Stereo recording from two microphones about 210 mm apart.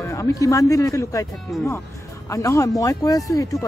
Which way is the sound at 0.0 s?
15° left (ahead or behind).